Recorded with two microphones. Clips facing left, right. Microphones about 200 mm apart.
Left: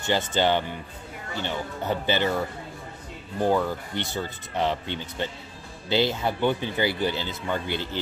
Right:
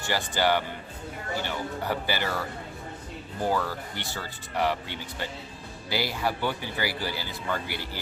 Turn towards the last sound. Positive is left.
turn(degrees=20)  # may be behind; listen again after turning